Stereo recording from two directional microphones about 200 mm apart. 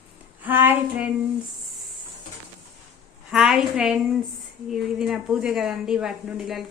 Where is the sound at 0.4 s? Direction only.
10° right (ahead or behind).